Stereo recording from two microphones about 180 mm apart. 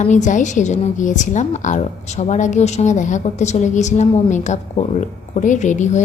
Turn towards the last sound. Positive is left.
turn(degrees=40)  # may be behind; listen again after turning